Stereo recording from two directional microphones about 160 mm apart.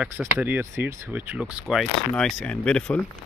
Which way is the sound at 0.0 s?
10° right (ahead or behind).